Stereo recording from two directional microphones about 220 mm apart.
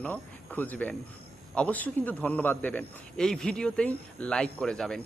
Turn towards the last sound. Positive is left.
turn(degrees=5)  # may be behind; listen again after turning